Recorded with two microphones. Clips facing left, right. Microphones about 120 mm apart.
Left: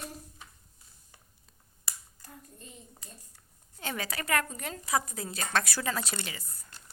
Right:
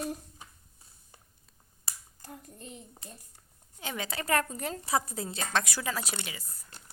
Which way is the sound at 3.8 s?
15° right (ahead or behind).